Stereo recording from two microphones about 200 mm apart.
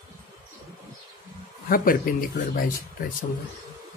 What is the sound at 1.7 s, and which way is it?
A woman's voice, 45° left (ahead or behind).